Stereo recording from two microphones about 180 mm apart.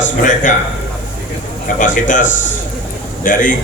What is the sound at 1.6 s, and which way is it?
A man's voice, 45° left (ahead or behind).